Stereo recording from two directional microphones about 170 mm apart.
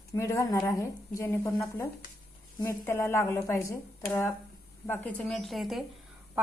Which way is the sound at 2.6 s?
15° left (ahead or behind).